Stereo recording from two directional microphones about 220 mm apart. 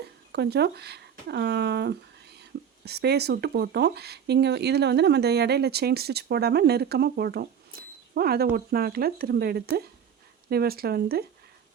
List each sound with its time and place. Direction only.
0.3 s speech: 50° right (ahead or behind)